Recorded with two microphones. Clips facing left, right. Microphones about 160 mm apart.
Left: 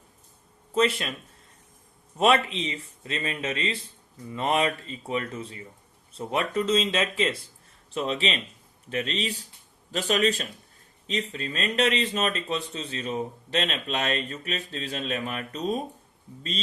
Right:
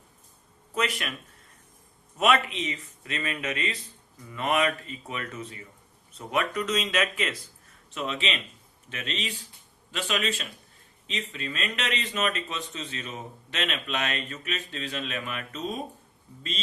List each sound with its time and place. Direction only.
0.7 s speech: 25° left (ahead or behind)
2.1 s speech: 30° left (ahead or behind)